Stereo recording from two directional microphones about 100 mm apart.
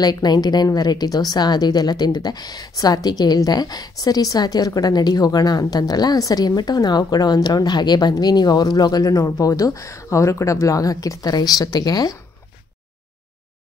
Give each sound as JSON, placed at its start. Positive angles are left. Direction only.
{"t": 0.0, "sound": "a woman's voice", "side_deg": 45}